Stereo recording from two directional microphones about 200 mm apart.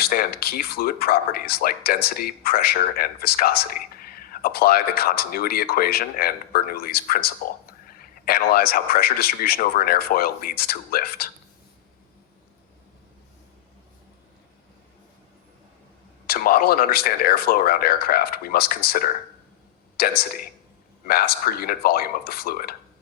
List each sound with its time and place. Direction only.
0.0 s speech: 50° left (ahead or behind)
16.2 s speech: 50° left (ahead or behind)